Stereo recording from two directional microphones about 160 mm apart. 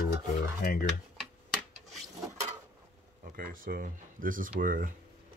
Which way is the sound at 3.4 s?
60° right (ahead or behind).